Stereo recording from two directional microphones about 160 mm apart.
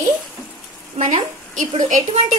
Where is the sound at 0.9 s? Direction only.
50° right (ahead or behind).